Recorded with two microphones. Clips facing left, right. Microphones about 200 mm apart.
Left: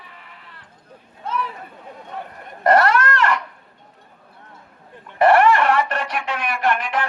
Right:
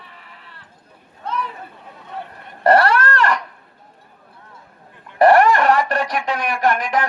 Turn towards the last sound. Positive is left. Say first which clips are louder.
# right 3 dB
turn(degrees=-40)  # may be behind; listen again after turning